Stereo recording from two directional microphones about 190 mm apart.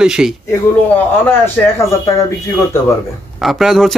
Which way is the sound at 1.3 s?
15° left (ahead or behind).